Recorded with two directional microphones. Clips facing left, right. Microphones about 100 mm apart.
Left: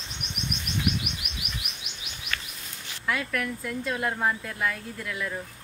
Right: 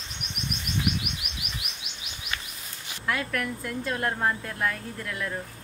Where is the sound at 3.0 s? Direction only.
Centre (ahead or behind).